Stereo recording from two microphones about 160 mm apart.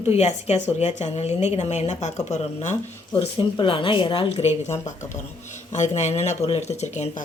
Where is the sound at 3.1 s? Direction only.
30° left (ahead or behind).